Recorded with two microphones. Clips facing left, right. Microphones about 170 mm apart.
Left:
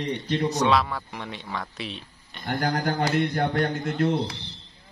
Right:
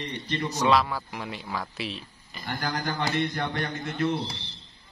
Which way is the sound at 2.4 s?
65° left (ahead or behind).